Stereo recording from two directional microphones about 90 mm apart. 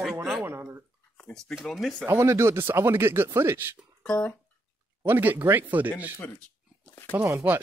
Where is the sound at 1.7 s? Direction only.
5° left (ahead or behind).